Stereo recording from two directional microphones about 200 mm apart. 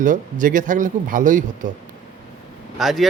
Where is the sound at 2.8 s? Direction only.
Centre (ahead or behind).